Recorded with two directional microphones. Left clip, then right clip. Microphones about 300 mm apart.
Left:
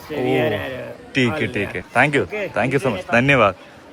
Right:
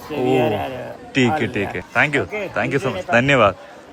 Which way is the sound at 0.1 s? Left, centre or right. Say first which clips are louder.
Right 1 dB; centre.